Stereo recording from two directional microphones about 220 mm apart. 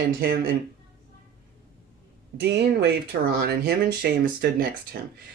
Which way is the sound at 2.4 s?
50° right (ahead or behind).